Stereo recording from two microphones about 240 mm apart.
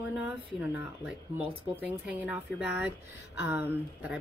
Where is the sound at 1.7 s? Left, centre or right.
Centre.